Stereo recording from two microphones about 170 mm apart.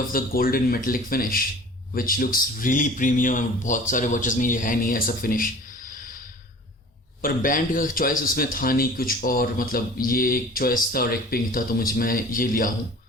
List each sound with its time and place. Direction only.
0.1 s speech: 60° left (ahead or behind)
7.2 s speech: 55° left (ahead or behind)